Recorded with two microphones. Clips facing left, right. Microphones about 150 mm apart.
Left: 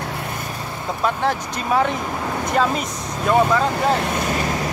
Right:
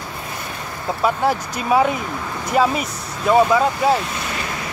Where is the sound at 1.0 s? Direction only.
10° right (ahead or behind).